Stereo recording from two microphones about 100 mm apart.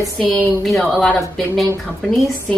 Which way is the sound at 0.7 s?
5° left (ahead or behind).